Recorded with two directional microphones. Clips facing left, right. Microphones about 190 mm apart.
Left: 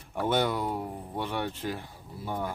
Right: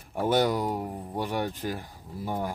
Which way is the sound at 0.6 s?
10° right (ahead or behind).